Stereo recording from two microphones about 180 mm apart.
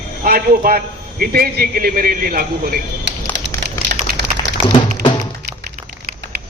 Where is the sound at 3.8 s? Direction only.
70° right (ahead or behind).